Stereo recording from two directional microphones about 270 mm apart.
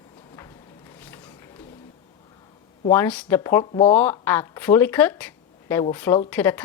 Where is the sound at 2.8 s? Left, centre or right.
Centre.